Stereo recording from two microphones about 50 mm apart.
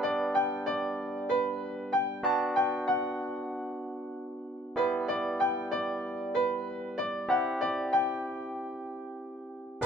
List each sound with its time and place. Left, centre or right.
0.0 s music: centre
2.2 s music: centre
4.7 s music: centre